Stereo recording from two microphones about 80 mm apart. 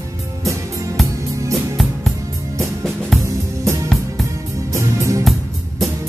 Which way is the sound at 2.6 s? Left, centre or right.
Centre.